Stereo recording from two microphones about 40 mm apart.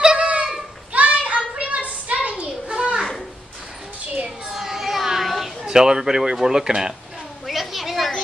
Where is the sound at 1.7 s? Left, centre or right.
Right.